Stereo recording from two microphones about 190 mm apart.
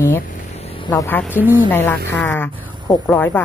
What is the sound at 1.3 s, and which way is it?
Speech, 10° right (ahead or behind).